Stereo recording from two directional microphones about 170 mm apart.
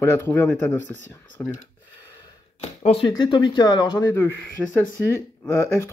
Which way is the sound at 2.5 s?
35° left (ahead or behind).